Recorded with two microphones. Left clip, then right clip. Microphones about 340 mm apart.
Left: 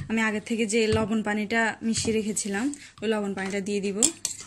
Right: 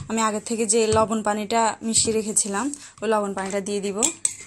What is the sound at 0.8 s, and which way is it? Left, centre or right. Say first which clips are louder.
Speech: right 6 dB; right.